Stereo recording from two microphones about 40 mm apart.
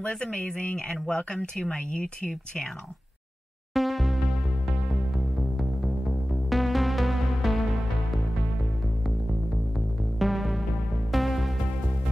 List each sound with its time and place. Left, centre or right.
0.0 s speech: left
0.6 s speech: left
3.7 s music: centre
6.5 s music: centre
10.1 s music: centre